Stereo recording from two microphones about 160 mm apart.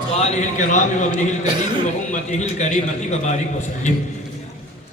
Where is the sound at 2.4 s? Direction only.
45° left (ahead or behind).